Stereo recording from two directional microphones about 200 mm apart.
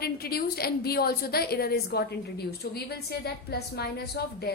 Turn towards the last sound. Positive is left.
turn(degrees=50)  # may be behind; listen again after turning